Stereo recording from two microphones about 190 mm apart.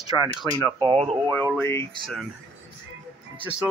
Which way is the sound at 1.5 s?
15° left (ahead or behind).